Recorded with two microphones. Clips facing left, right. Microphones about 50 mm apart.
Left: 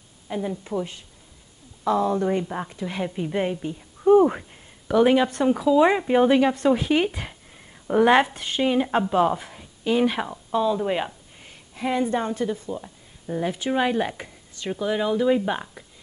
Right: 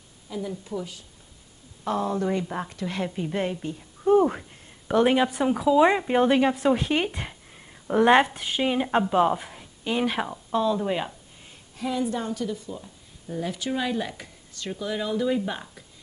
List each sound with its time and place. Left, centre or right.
0.3 s a woman's voice: left
2.4 s speech: centre
2.7 s a woman's voice: centre
4.9 s speech: centre
11.7 s a woman's voice: left